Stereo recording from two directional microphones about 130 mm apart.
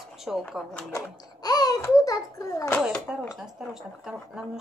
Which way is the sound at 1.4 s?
30° left (ahead or behind).